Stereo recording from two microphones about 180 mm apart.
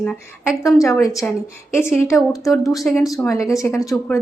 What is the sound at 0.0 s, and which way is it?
Speech, 5° left (ahead or behind).